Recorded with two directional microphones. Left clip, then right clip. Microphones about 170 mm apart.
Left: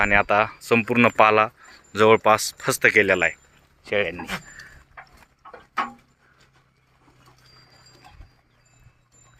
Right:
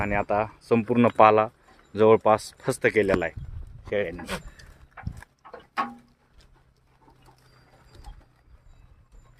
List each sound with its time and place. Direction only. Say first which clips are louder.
0.0 s speech: left 7 dB; 5° right (ahead or behind)